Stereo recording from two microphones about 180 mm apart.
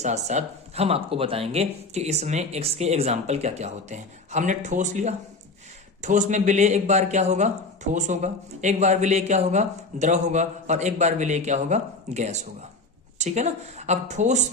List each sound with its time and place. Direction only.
0.0 s speech: 40° right (ahead or behind)